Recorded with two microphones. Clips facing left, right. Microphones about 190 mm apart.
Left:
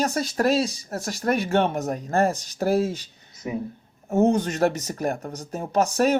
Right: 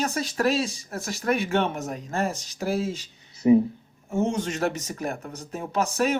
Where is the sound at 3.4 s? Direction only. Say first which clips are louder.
Right 12 dB; 30° right (ahead or behind).